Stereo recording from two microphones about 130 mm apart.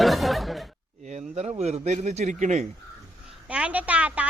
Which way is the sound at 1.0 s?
55° right (ahead or behind).